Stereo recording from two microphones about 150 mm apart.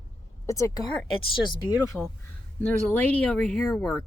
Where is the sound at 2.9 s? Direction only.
10° left (ahead or behind).